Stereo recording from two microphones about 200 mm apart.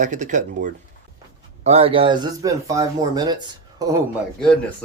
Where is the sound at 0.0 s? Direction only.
40° right (ahead or behind); by 4.0 s 20° right (ahead or behind).